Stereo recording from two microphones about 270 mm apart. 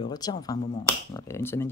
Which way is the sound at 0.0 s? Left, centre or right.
Centre.